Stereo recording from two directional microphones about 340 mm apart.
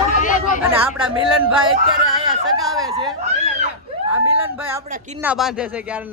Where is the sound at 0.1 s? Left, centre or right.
Left.